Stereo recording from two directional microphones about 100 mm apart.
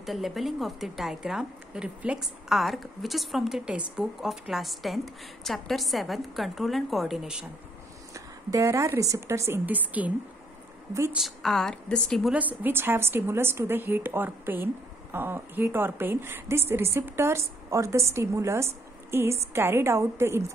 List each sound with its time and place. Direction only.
0.0 s speech: centre (ahead or behind)
8.1 s speech: 30° right (ahead or behind)
9.7 s a woman's voice: 15° right (ahead or behind)
11.1 s speech: centre (ahead or behind)
12.3 s a woman's voice: 15° right (ahead or behind)